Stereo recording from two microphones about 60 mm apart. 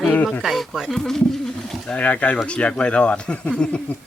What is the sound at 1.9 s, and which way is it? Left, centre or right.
Speech, left.